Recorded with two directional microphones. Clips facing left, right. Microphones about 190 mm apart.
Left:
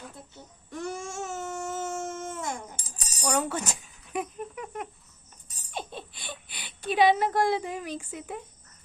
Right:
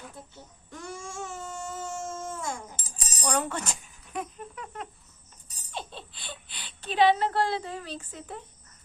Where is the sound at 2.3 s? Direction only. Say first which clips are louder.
Left 1 dB; 20° left (ahead or behind).